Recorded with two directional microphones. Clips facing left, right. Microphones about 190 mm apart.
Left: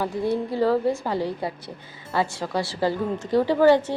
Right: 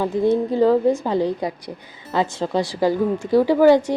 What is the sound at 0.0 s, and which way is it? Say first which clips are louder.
A woman's voice: right 6 dB; 20° right (ahead or behind).